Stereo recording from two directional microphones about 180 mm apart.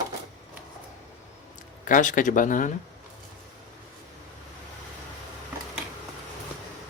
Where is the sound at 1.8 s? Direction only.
45° left (ahead or behind).